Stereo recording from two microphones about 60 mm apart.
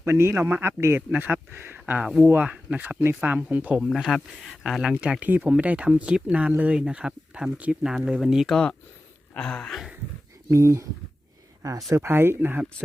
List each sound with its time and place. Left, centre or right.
0.0 s a man's voice: right
1.1 s speech: right
3.8 s speech: centre
5.2 s speech: right; by 8.4 s centre
8.4 s a sound: centre
10.5 s speech: right
11.9 s a man's voice: right